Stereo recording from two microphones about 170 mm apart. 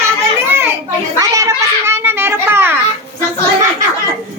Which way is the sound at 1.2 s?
20° right (ahead or behind).